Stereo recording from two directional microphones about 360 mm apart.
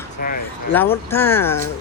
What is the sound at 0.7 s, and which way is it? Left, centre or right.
Speech, centre.